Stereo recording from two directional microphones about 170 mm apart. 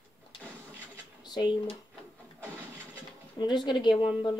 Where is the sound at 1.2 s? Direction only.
25° left (ahead or behind).